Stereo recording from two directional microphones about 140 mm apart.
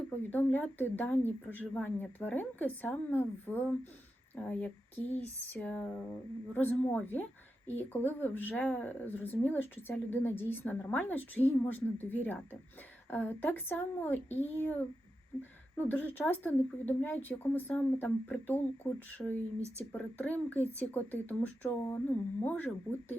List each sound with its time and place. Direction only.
0.3 s a woman's voice: 15° left (ahead or behind)
19.5 s speech: 50° left (ahead or behind)
19.9 s a woman's voice: 10° left (ahead or behind)